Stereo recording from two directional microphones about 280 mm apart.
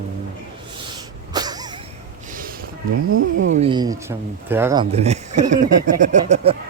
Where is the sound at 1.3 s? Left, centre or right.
Centre.